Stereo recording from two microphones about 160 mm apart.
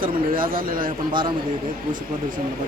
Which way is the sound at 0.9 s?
30° right (ahead or behind).